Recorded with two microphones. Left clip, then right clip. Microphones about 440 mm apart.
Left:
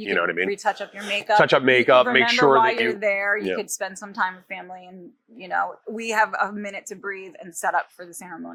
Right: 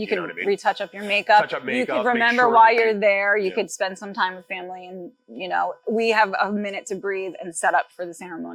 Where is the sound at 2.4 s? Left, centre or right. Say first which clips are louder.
Right 3 dB; right.